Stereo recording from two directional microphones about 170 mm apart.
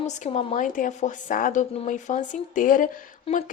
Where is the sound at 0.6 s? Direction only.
50° left (ahead or behind).